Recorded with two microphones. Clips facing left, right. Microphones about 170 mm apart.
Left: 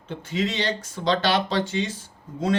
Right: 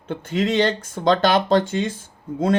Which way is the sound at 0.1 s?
55° right (ahead or behind).